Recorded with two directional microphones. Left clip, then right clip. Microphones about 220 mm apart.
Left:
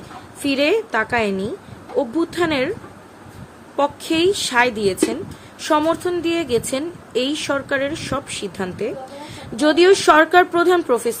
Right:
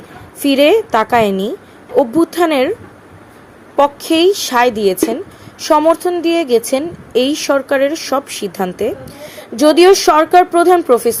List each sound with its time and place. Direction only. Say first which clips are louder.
0.4 s a woman's voice: right 8 dB; 15° right (ahead or behind)
3.8 s a woman's voice: right 7 dB; 15° right (ahead or behind)